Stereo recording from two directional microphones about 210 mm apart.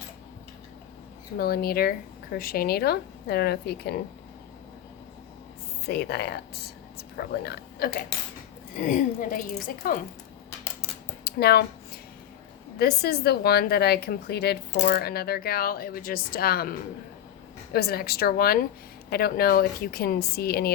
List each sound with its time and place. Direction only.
1.4 s speech: 45° left (ahead or behind)
5.8 s speech: 50° left (ahead or behind)
8.7 s a woman's voice: 35° left (ahead or behind)
11.2 s a sound: 50° left (ahead or behind)
12.8 s speech: 50° left (ahead or behind)